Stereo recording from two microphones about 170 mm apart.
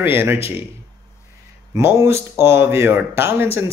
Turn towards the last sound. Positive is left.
turn(degrees=-15)  # may be behind; listen again after turning